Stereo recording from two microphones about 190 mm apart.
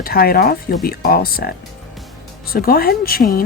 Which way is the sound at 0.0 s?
50° left (ahead or behind).